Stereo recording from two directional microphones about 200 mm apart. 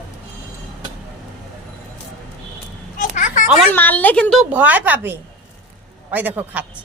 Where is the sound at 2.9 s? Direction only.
40° left (ahead or behind).